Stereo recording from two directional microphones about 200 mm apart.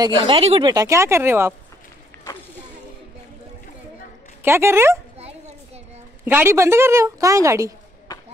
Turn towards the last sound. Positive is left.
turn(degrees=-15)  # may be behind; listen again after turning